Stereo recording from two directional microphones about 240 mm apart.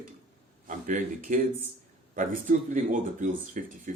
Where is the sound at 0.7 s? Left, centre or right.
Right.